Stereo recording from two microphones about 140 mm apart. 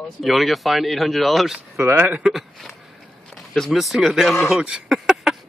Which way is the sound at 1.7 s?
15° right (ahead or behind).